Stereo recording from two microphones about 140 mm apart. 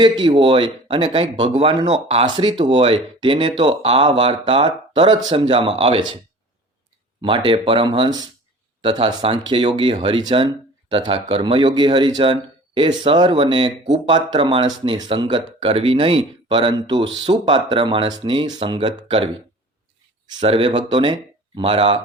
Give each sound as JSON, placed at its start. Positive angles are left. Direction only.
{"t": 0.0, "sound": "speech", "side_deg": -35}
{"t": 2.2, "sound": "speech", "side_deg": -35}
{"t": 7.2, "sound": "speech", "side_deg": -35}